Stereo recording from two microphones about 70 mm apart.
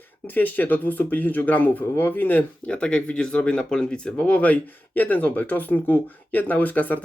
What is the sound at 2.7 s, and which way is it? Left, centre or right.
Speech, centre.